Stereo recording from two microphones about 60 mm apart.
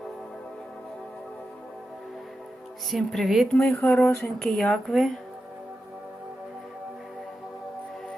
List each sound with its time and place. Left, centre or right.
2.9 s speech: centre
3.5 s speech: centre